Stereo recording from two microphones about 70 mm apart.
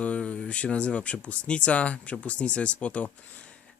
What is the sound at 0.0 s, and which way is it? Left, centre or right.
Speech, centre.